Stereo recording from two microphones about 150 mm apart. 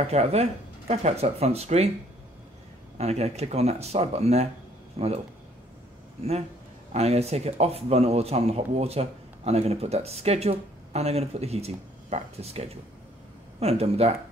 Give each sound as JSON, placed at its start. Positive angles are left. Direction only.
{"t": 0.0, "sound": "speech", "side_deg": -45}
{"t": 3.0, "sound": "speech", "side_deg": -45}
{"t": 6.9, "sound": "speech", "side_deg": -45}